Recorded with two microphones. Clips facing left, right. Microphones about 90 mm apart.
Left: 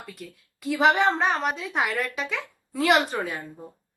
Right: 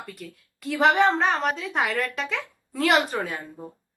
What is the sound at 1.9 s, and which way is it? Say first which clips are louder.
Speech: right 1 dB; 15° left (ahead or behind).